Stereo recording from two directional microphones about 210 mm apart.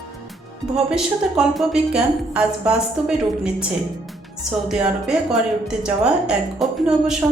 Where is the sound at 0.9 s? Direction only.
Centre (ahead or behind).